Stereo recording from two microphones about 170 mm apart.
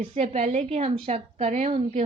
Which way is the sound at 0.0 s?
35° right (ahead or behind).